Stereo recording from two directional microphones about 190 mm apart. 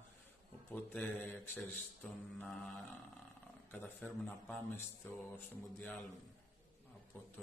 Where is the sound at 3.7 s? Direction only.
10° left (ahead or behind).